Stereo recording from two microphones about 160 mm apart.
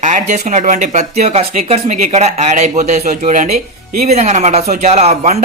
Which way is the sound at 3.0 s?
60° right (ahead or behind).